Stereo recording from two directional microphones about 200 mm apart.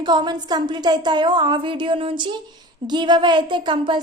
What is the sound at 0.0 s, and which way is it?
A woman's voice, 20° right (ahead or behind).